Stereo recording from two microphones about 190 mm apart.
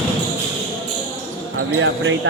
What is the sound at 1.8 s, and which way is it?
Speech, 90° right.